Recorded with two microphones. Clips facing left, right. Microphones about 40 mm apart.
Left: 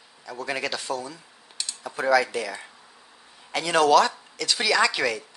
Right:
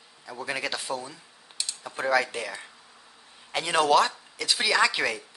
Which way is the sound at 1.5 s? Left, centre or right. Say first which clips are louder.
Left 2 dB; centre.